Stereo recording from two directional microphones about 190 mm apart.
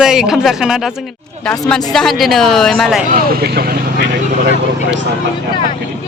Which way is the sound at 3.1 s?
50° right (ahead or behind).